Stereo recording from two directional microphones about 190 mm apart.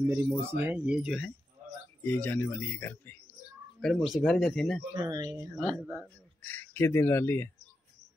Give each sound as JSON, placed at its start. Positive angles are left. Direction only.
{"t": 0.0, "sound": "speech", "side_deg": -10}
{"t": 2.0, "sound": "speech", "side_deg": 10}
{"t": 4.9, "sound": "speech", "side_deg": -20}
{"t": 6.4, "sound": "speech", "side_deg": 10}